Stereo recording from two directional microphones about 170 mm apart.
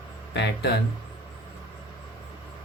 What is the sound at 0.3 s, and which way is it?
Speech, 80° left.